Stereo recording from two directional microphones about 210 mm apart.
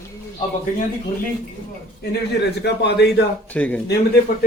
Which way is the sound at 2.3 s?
55° left (ahead or behind).